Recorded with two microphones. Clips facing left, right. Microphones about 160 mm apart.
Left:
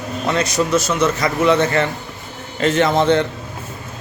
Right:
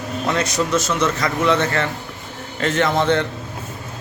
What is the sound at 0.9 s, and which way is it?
A man's voice, 15° left (ahead or behind).